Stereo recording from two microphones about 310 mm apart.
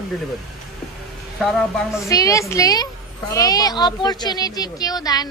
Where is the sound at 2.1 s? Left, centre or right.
Centre.